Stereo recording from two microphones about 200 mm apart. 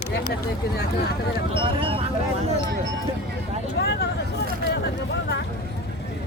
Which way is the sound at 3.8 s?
60° left (ahead or behind).